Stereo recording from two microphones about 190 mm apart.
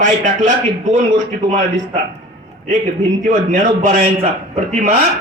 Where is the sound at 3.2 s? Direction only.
45° right (ahead or behind).